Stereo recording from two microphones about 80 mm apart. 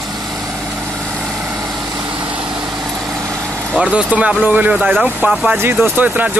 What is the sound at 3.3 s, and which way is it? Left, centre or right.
Vehicle, centre.